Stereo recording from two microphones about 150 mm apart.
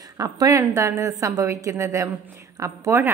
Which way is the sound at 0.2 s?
25° right (ahead or behind).